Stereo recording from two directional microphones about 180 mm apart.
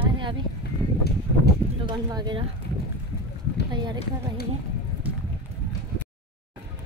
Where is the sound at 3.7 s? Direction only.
25° right (ahead or behind).